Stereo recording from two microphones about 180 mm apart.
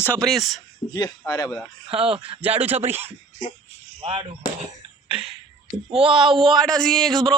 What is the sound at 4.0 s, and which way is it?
Speech, 25° right (ahead or behind).